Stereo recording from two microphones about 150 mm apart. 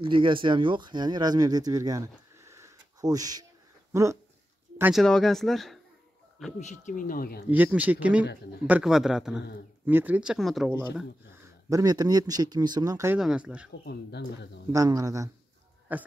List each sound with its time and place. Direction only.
0.0 s speech: 35° right (ahead or behind)
4.9 s speech: 5° left (ahead or behind)
6.6 s speech: 55° left (ahead or behind); by 7.4 s 80° left
7.4 s speech: 10° right (ahead or behind)
11.2 s speech: 25° right (ahead or behind)
13.2 s speech: 5° right (ahead or behind)
14.7 s speech: 25° right (ahead or behind)
15.9 s speech: 10° right (ahead or behind)